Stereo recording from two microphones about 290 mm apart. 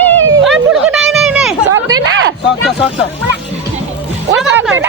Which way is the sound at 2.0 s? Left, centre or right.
Right.